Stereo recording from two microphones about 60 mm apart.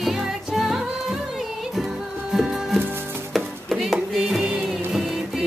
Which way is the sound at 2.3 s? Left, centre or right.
Centre.